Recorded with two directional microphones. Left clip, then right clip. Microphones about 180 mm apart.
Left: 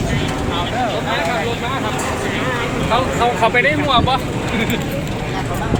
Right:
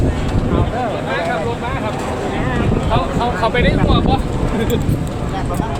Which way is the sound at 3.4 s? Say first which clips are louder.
Left 2 dB; 45° left (ahead or behind).